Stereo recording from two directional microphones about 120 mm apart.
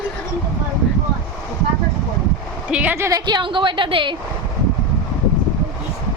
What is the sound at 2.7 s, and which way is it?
Speech, 10° right (ahead or behind).